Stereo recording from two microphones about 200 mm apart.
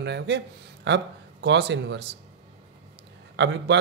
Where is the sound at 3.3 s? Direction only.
60° right (ahead or behind).